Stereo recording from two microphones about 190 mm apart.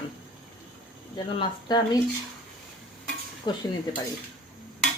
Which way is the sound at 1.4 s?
20° left (ahead or behind).